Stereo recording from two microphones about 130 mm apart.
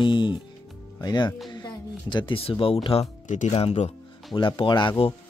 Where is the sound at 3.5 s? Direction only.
50° left (ahead or behind).